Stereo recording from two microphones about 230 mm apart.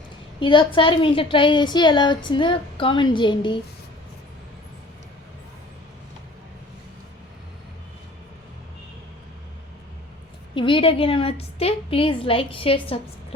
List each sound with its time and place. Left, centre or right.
0.3 s a woman's voice: left
10.5 s a woman's voice: left